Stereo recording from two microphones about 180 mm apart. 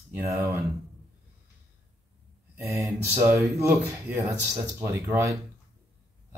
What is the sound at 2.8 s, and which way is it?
Speech, 15° right (ahead or behind).